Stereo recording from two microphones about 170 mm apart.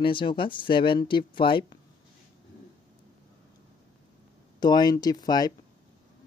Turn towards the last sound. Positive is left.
turn(degrees=25)  # may be behind; listen again after turning